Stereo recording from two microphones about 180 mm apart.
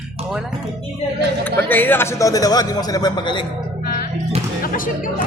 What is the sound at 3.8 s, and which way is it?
Music, 55° left (ahead or behind).